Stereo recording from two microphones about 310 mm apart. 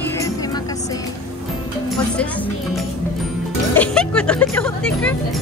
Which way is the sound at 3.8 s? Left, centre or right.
Centre.